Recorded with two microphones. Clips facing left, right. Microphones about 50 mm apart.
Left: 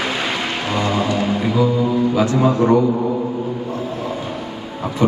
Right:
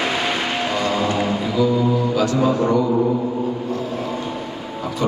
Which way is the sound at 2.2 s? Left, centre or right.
Left.